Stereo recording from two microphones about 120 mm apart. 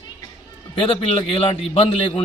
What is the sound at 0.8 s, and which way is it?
Speech, 50° left (ahead or behind).